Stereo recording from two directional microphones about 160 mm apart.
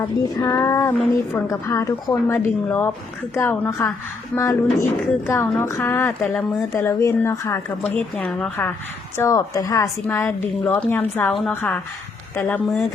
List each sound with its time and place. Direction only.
0.2 s a woman's voice: 25° left (ahead or behind); by 12.8 s 5° left (ahead or behind)